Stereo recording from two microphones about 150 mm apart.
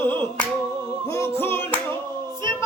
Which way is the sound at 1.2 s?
15° left (ahead or behind).